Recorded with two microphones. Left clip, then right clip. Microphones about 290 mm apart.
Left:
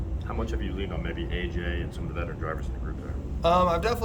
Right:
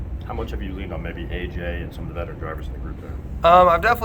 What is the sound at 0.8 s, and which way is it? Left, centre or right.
Speech, right.